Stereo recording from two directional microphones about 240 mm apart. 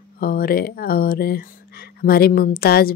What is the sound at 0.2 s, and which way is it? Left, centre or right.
Speech, left.